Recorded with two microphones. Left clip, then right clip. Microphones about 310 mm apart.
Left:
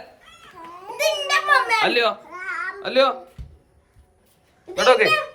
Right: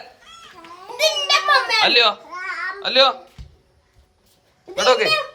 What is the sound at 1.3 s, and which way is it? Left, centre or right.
Children playing, right.